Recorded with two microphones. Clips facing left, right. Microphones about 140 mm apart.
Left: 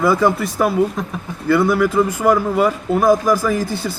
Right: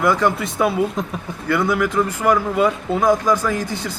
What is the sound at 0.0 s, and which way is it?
Speech, 10° left (ahead or behind).